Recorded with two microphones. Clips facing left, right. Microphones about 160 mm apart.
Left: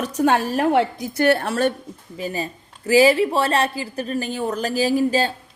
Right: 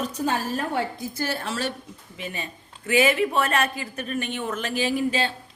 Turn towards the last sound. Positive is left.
turn(degrees=40)  # may be behind; listen again after turning